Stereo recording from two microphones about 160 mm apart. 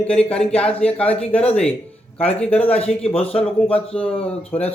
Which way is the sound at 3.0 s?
40° left (ahead or behind).